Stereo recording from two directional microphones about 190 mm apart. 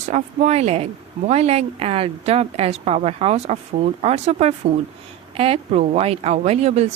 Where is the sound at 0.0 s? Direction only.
35° right (ahead or behind).